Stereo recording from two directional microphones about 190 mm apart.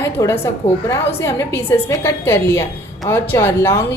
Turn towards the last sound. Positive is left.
turn(degrees=15)  # may be behind; listen again after turning